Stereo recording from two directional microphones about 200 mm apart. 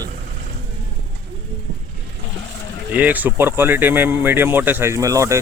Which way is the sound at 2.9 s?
10° right (ahead or behind).